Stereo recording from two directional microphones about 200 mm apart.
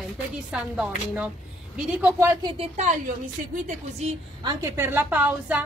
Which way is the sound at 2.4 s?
30° right (ahead or behind).